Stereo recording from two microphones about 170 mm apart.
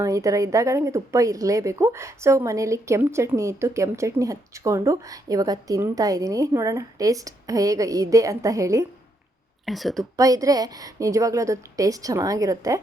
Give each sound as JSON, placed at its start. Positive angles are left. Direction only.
{"t": 0.0, "sound": "a woman's voice", "side_deg": -20}
{"t": 9.6, "sound": "speech", "side_deg": 0}
{"t": 10.2, "sound": "a woman's voice", "side_deg": -20}